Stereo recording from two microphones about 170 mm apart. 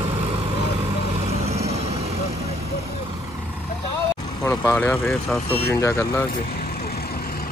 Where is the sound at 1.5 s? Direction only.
40° right (ahead or behind).